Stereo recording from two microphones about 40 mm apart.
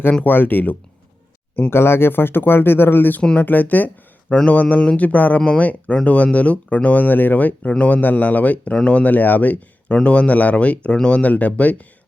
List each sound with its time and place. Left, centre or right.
0.3 s speech: left
1.7 s speech: left
3.3 s speech: left
8.7 s speech: left